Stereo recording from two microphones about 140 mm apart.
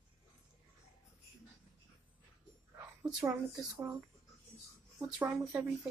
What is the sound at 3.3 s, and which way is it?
Speech, 15° right (ahead or behind).